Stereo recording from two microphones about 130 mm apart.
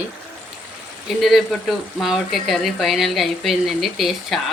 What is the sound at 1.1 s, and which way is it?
Speech, centre (ahead or behind).